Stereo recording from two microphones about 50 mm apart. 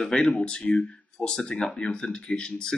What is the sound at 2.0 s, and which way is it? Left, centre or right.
Speech, centre.